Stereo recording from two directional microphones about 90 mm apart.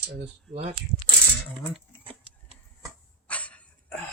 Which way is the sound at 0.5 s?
65° right (ahead or behind).